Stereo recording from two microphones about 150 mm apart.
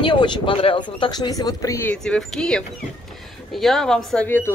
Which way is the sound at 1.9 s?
5° left (ahead or behind).